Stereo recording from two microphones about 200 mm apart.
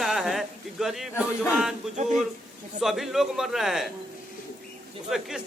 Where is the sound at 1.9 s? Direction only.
35° right (ahead or behind).